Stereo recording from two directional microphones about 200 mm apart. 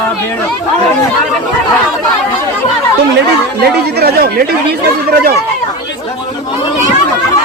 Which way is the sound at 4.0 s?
50° right (ahead or behind).